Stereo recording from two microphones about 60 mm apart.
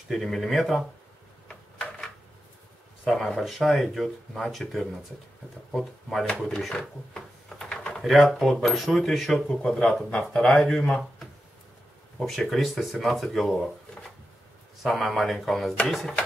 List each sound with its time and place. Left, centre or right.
0.1 s speech: centre
1.5 s a sound: centre
3.3 s speech: centre
6.5 s drawer open or close: centre
8.0 s speech: centre
9.6 s speech: centre
12.2 s speech: centre